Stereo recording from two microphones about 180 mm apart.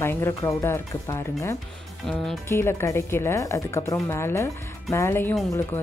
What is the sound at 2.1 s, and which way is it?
Speech, 5° left (ahead or behind).